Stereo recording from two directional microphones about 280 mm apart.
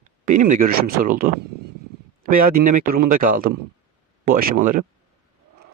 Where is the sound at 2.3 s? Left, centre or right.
Right.